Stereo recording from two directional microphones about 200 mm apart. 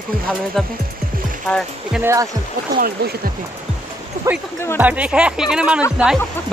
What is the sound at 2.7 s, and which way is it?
Speech, 50° right (ahead or behind).